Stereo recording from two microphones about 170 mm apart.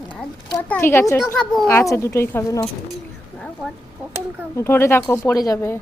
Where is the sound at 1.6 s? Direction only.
15° left (ahead or behind).